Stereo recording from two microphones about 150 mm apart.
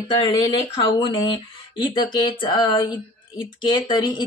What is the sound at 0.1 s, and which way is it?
Speech, 30° left (ahead or behind).